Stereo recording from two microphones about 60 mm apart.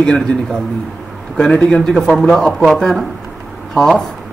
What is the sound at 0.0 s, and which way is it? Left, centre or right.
Speech, centre.